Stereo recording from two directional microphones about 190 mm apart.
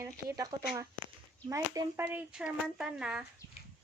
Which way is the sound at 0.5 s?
20° right (ahead or behind).